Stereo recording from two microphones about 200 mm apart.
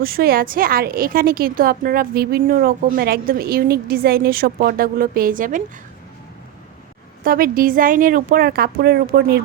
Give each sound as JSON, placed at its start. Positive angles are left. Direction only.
{"t": 0.0, "sound": "a woman's voice", "side_deg": -50}
{"t": 7.3, "sound": "a woman's voice", "side_deg": -45}